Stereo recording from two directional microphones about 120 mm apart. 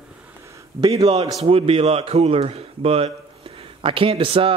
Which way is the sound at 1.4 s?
55° right (ahead or behind).